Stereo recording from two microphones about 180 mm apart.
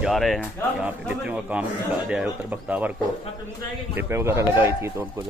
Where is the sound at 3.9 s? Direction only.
15° right (ahead or behind).